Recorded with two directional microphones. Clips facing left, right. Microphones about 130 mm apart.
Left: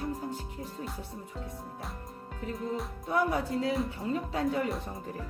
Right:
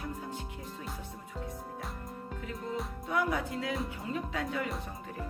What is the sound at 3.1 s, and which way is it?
Speech, 35° left (ahead or behind).